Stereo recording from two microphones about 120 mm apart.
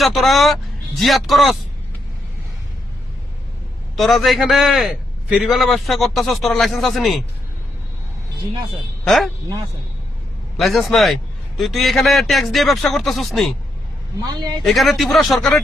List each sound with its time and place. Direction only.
0.0 s a man's voice: centre (ahead or behind)
3.9 s a man's voice: centre (ahead or behind)
9.0 s a man's voice: centre (ahead or behind)
10.6 s a man's voice: centre (ahead or behind)
14.2 s a man's voice: 35° right (ahead or behind)
14.6 s a man's voice: centre (ahead or behind)